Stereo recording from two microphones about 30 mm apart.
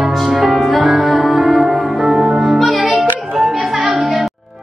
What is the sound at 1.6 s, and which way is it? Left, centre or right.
Music, centre.